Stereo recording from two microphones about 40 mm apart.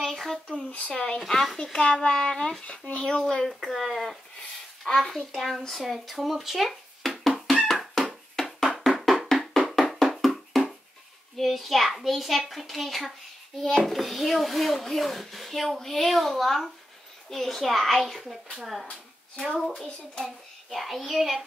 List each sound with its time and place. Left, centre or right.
0.0 s a sound: centre
0.7 s speech: left
1.0 s a child's voice: centre
2.6 s a child's voice: left
3.4 s a child's voice: centre
8.1 s bouncing: centre
8.8 s music: centre
10.5 s a sound: centre
11.3 s a child's voice: centre
19.6 s a child's voice: centre
20.2 s a child's voice: centre